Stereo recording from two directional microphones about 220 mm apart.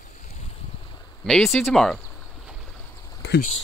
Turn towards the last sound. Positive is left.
turn(degrees=50)  # may be behind; listen again after turning